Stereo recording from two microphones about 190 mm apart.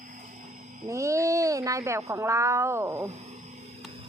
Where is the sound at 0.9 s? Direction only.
15° right (ahead or behind).